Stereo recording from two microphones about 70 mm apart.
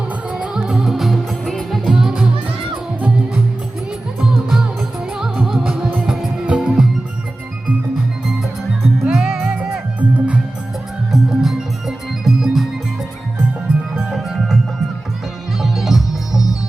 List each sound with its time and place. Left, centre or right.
0.3 s music: centre
1.9 s music: centre
4.2 s music: centre
5.3 s music: centre
5.6 s music: centre
9.0 s music: centre
9.4 s music: right
11.1 s music: centre
14.1 s music: centre